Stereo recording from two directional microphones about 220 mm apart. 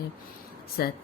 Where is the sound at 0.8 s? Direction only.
45° left (ahead or behind).